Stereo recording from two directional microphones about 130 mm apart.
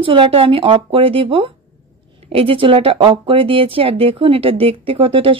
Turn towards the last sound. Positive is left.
turn(degrees=-45)  # may be behind; listen again after turning